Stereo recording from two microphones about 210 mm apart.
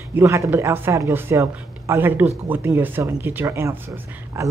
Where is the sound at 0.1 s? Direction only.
10° right (ahead or behind).